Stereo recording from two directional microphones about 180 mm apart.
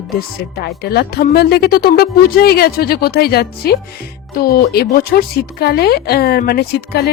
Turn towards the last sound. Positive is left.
turn(degrees=60)  # may be behind; listen again after turning